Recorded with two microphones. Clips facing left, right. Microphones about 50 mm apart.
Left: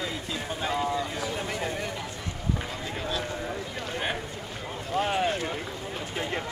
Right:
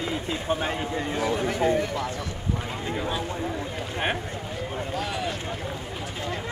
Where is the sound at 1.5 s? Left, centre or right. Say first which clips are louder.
Right 8 dB; right.